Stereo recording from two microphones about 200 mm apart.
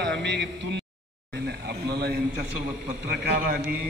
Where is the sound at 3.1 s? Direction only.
50° right (ahead or behind).